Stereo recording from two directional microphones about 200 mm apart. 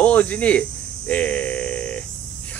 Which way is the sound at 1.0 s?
5° left (ahead or behind).